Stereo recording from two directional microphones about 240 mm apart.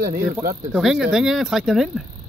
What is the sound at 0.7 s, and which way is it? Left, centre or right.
Speech, centre.